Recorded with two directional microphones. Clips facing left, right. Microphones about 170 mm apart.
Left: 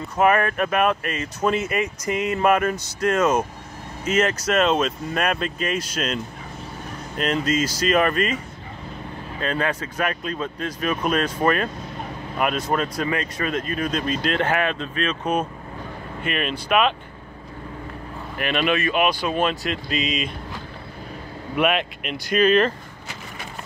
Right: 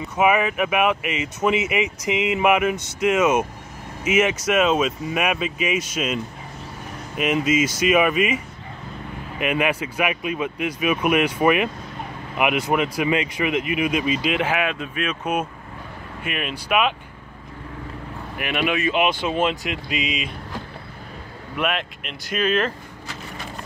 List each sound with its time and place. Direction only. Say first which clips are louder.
0.0 s speech: even; 5° right (ahead or behind)
1.8 s speech: right 1 dB; 90° right
2.2 s speech: even; 10° right (ahead or behind)
9.4 s speech: right 3 dB; 15° right (ahead or behind)
12.7 s speech: right 3 dB; 10° right (ahead or behind)
18.4 s speech: left 1 dB; 10° right (ahead or behind)
21.5 s speech: left 4 dB; 5° left (ahead or behind)